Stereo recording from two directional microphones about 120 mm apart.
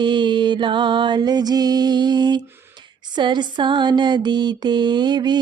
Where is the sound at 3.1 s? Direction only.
40° right (ahead or behind).